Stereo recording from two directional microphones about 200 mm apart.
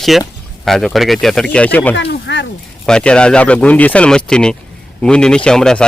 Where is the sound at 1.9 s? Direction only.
60° left (ahead or behind).